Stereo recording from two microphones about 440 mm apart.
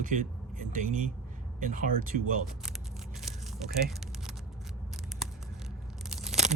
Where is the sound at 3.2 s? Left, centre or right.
Centre.